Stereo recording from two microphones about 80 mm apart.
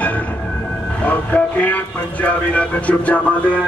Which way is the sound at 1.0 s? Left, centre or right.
Centre.